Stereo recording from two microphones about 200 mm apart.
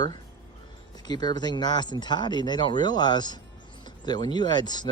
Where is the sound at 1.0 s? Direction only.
20° left (ahead or behind).